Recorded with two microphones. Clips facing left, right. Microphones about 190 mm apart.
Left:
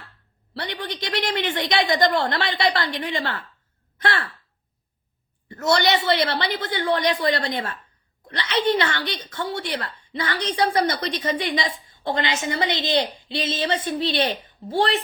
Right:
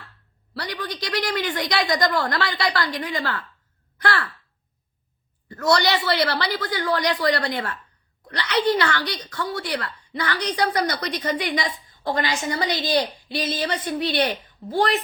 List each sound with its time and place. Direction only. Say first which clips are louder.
0.5 s a woman's voice: even; 25° left (ahead or behind)
5.5 s a woman's voice: even; 25° left (ahead or behind)